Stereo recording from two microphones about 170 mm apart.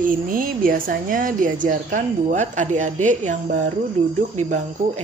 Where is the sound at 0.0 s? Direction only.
55° right (ahead or behind).